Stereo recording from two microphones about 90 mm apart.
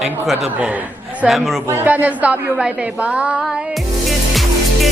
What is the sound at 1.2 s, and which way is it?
Speech, centre (ahead or behind).